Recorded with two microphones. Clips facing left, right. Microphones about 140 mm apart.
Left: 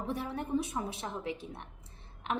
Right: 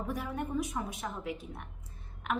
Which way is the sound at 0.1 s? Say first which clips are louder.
Left 3 dB; 30° left (ahead or behind).